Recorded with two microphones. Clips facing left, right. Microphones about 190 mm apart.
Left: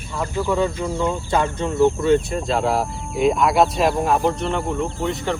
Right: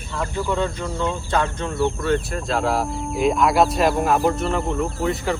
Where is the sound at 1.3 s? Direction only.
15° left (ahead or behind).